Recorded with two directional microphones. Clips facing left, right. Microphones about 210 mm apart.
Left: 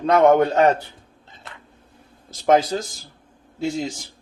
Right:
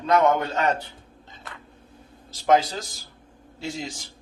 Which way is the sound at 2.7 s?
45° left (ahead or behind).